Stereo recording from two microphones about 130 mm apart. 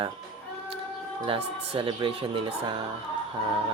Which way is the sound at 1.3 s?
45° right (ahead or behind).